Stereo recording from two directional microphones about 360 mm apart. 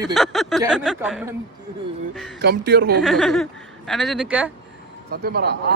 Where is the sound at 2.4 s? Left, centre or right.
Right.